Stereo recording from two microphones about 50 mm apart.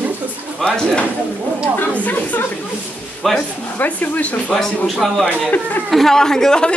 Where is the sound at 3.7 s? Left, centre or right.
Left.